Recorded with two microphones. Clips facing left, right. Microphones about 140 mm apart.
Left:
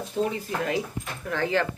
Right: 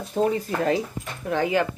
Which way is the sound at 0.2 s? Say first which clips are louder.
Right 4 dB; 50° right (ahead or behind).